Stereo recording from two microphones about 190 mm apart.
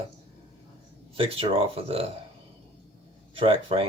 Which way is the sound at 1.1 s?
30° right (ahead or behind).